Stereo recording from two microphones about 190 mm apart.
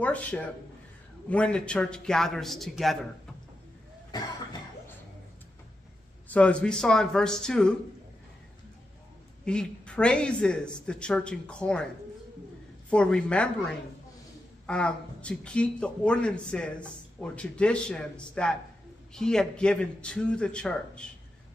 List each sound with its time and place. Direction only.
0.0 s speech: 5° left (ahead or behind)
6.2 s speech: 5° left (ahead or behind)
9.4 s speech: 5° left (ahead or behind)
12.9 s speech: 5° left (ahead or behind)
14.7 s speech: 5° left (ahead or behind)